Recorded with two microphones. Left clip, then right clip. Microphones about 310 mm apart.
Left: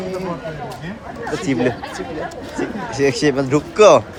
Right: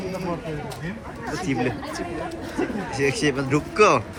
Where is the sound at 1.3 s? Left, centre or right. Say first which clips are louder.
Left 6 dB; left.